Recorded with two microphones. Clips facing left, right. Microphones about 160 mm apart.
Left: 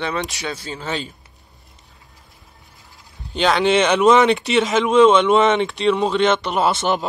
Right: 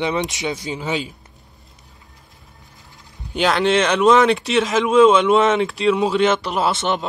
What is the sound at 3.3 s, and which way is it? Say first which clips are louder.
Speech: left 1 dB; centre (ahead or behind).